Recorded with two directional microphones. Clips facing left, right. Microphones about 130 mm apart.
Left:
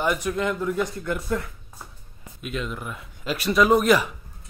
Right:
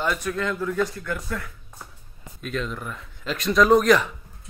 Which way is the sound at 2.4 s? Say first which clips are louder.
Right 1 dB; 5° left (ahead or behind).